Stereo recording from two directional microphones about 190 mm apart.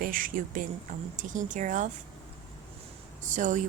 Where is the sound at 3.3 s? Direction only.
40° right (ahead or behind).